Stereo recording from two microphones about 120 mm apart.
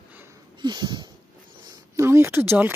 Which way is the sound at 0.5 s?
40° right (ahead or behind).